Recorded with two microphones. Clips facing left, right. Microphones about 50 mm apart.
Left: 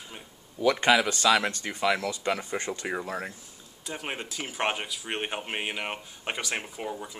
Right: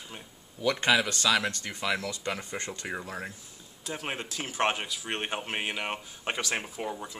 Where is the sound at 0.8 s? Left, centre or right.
Left.